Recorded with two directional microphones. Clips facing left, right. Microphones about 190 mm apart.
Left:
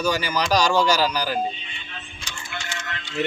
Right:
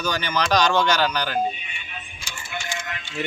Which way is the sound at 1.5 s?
15° right (ahead or behind).